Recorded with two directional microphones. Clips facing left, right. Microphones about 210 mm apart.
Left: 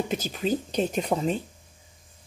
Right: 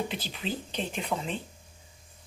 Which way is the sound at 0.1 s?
45° left (ahead or behind).